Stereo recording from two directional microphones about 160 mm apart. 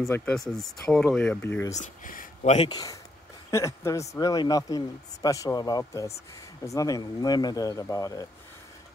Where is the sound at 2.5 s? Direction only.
30° left (ahead or behind).